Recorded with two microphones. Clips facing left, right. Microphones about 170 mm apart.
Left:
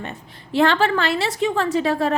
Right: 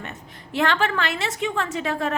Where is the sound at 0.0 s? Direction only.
30° left (ahead or behind).